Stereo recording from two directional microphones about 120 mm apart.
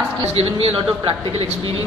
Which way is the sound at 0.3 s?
55° right (ahead or behind).